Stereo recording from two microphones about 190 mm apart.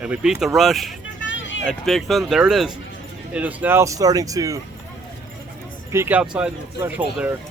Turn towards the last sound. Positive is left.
turn(degrees=-10)  # may be behind; listen again after turning